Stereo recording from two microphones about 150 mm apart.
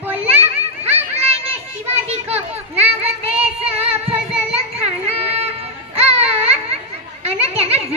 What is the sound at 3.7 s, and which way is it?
Child singing, 40° right (ahead or behind).